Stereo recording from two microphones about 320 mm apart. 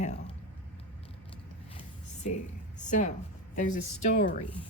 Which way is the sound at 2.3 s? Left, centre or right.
Left.